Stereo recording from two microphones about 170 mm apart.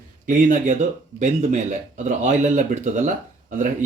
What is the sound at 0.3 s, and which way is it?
Speech, 50° right (ahead or behind).